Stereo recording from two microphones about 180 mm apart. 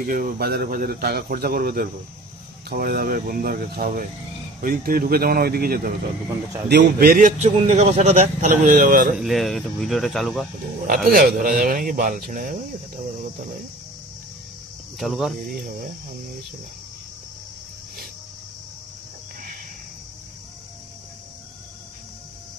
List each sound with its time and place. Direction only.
0.0 s a man's voice: 50° right (ahead or behind)
9.1 s speech: centre (ahead or behind)
11.1 s a man's voice: 55° right (ahead or behind)
15.0 s speech: centre (ahead or behind)
15.6 s a man's voice: 50° right (ahead or behind)